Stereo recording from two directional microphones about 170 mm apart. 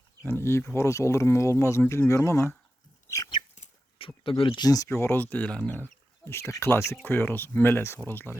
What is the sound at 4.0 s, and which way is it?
Speech, 30° left (ahead or behind).